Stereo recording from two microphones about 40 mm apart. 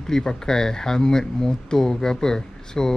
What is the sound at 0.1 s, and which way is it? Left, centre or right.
Speech, centre.